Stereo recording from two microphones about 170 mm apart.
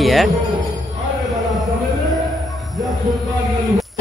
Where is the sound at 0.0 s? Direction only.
Centre (ahead or behind).